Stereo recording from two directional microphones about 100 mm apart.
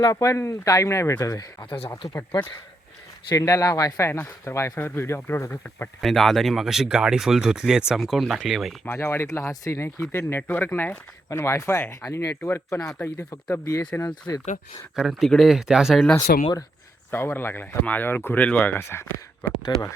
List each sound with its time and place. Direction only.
0.0 s speech: 35° left (ahead or behind)
1.2 s speech: 40° left (ahead or behind)
3.3 s speech: 35° left (ahead or behind)
6.0 s speech: centre (ahead or behind)
8.8 s speech: 25° left (ahead or behind); by 14.4 s 40° left (ahead or behind)
14.9 s speech: centre (ahead or behind)
16.1 s speech: 35° left (ahead or behind)
17.1 s speech: 20° left (ahead or behind)